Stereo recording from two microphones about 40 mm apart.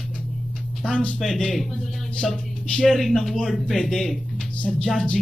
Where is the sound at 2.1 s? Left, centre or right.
Left.